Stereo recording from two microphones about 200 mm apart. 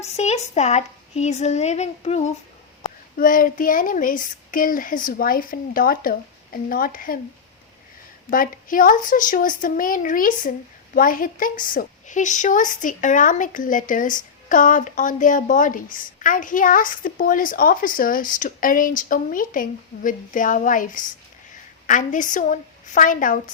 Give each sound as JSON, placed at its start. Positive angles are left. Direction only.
{"t": 0.0, "sound": "a woman's voice", "side_deg": 35}
{"t": 3.2, "sound": "a woman's voice", "side_deg": 45}
{"t": 8.3, "sound": "a woman's voice", "side_deg": 45}